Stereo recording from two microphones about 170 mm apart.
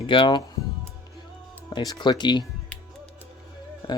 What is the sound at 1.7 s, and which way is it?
Speech, 25° left (ahead or behind).